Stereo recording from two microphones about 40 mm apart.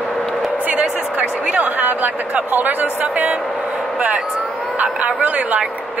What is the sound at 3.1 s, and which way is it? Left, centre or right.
Speech, right.